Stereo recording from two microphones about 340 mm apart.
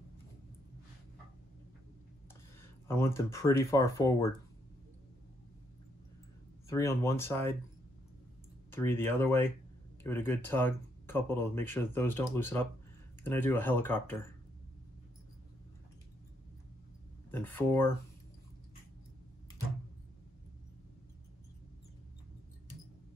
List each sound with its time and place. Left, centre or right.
2.9 s speech: centre
6.7 s speech: centre
8.7 s speech: centre
17.3 s speech: centre